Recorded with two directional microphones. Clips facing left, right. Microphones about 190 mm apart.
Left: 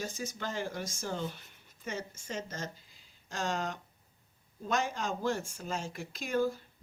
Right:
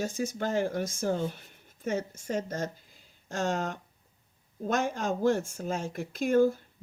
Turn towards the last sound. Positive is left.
turn(degrees=-50)  # may be behind; listen again after turning